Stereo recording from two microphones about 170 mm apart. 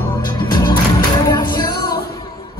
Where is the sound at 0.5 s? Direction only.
25° left (ahead or behind).